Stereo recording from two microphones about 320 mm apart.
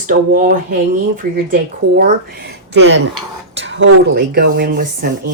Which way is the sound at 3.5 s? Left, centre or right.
Right.